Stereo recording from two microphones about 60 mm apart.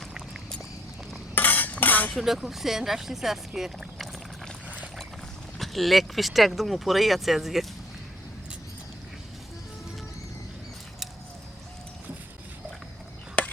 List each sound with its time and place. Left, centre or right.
0.1 s vehicle: centre
1.4 s stir: left
1.8 s dishes: left
2.1 s speech: centre
5.5 s speech: centre
13.4 s chop: left